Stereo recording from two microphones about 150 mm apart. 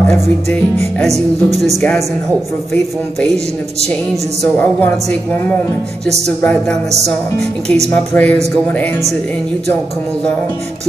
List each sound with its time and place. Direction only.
1.0 s music: 45° right (ahead or behind)
1.8 s a woman's voice: 5° left (ahead or behind)
4.1 s a woman's voice: 5° left (ahead or behind)
6.0 s music: 45° right (ahead or behind)
6.4 s music: 5° left (ahead or behind)
7.6 s music: 45° right (ahead or behind)
7.9 s a woman's voice: 10° left (ahead or behind)